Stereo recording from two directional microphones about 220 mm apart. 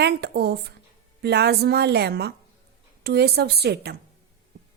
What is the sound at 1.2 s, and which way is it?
A woman's voice, 50° right (ahead or behind).